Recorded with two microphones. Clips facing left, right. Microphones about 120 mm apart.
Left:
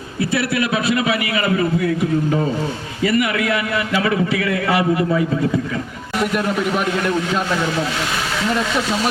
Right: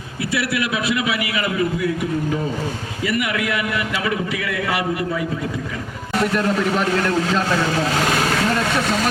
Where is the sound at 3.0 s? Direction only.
30° left (ahead or behind).